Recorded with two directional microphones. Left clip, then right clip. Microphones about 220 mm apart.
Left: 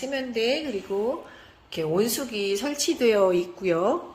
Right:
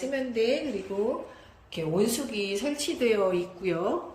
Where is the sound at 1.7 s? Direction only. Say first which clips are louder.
Left 3 dB; 15° left (ahead or behind).